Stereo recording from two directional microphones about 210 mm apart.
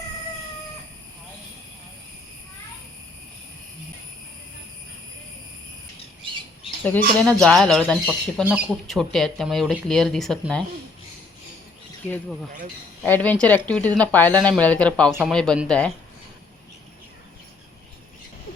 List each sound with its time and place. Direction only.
6.8 s speech: 5° left (ahead or behind)
13.0 s a woman's voice: 10° left (ahead or behind)